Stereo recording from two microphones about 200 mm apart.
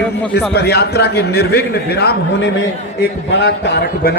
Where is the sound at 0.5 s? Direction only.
55° left (ahead or behind).